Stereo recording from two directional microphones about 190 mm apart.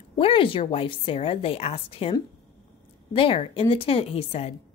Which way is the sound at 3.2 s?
30° left (ahead or behind).